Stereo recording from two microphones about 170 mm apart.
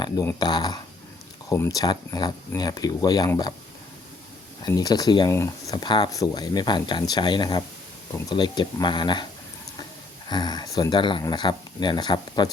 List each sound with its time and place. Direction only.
0.0 s speech: 20° left (ahead or behind)
4.6 s speech: 25° left (ahead or behind)
10.2 s speech: 25° left (ahead or behind)